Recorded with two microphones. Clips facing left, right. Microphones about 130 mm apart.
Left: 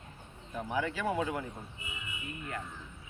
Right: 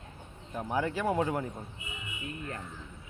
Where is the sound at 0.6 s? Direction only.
40° right (ahead or behind).